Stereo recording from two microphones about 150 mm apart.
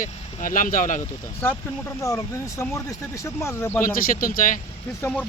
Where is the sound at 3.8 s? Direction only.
70° left (ahead or behind).